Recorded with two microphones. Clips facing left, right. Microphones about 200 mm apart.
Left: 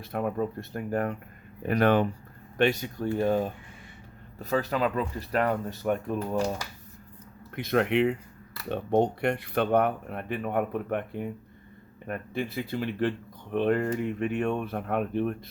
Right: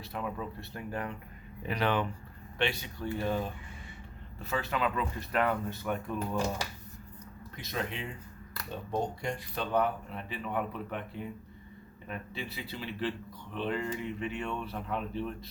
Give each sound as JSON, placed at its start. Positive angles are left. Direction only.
{"t": 0.0, "sound": "speech", "side_deg": 50}
{"t": 7.5, "sound": "speech", "side_deg": 60}